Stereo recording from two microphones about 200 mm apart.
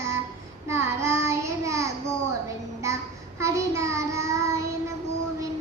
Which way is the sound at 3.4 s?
15° right (ahead or behind).